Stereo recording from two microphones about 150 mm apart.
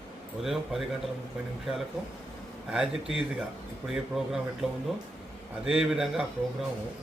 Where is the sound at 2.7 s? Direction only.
5° right (ahead or behind).